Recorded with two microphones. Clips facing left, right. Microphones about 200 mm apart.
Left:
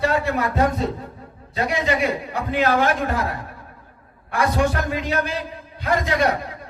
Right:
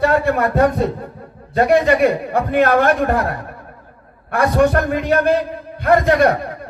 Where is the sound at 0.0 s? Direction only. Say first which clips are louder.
Right 5 dB; 55° right (ahead or behind).